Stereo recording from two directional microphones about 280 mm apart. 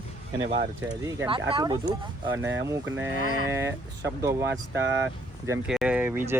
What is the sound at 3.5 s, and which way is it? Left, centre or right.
Speech, centre.